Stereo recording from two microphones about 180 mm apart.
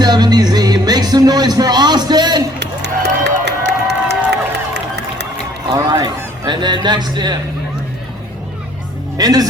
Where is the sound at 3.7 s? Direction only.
70° right (ahead or behind).